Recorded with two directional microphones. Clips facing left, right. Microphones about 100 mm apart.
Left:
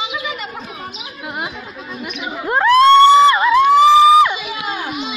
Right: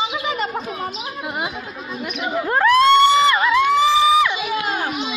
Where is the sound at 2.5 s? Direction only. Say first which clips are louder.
Left 4 dB; 25° left (ahead or behind).